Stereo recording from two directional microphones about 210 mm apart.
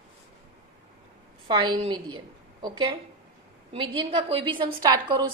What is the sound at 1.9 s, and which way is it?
A woman's voice, 20° right (ahead or behind).